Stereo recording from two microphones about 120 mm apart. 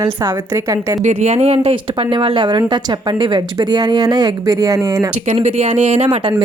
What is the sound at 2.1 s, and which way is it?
Speech, 45° right (ahead or behind).